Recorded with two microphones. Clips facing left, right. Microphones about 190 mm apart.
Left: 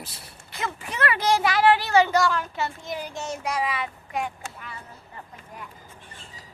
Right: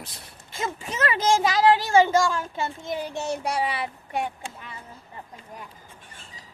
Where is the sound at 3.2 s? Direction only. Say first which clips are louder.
Right 1 dB; 35° right (ahead or behind).